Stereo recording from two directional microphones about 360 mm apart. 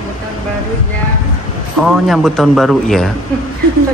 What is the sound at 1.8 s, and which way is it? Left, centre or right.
A woman's voice, centre.